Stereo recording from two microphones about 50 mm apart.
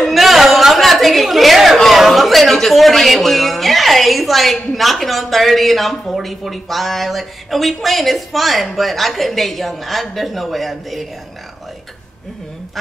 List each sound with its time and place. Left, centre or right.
0.1 s a woman's voice: centre